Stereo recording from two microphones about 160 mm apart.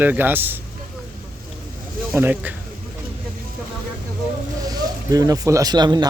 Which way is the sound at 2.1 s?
10° right (ahead or behind).